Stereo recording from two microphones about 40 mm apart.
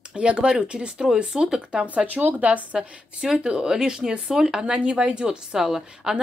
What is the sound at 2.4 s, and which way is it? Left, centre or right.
A woman's voice, right.